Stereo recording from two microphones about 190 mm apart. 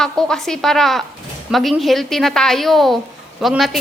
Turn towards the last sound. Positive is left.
turn(degrees=0)  # may be behind; listen again after turning